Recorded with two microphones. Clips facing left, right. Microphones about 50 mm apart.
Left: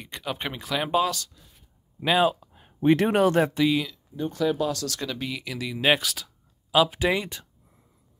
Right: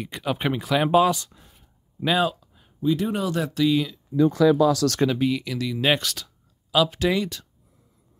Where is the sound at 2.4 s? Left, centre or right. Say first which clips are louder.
Left 4 dB; left.